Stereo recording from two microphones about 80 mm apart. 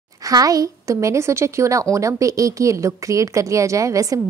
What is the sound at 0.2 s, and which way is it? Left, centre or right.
A woman's voice, right.